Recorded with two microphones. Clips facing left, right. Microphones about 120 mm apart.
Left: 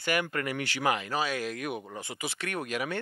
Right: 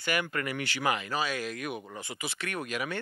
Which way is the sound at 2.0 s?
45° left (ahead or behind).